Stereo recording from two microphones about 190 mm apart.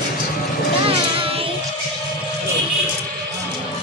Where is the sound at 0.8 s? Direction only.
30° right (ahead or behind).